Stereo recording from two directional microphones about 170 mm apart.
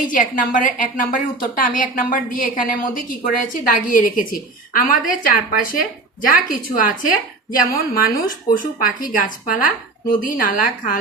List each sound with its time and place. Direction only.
0.1 s a woman's voice: 50° left (ahead or behind)